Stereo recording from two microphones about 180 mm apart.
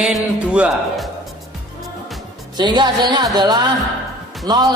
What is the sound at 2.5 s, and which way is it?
Speech, 25° right (ahead or behind).